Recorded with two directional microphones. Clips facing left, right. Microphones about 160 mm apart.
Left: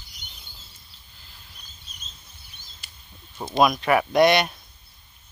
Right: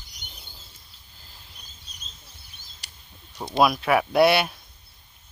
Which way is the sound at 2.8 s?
75° right (ahead or behind).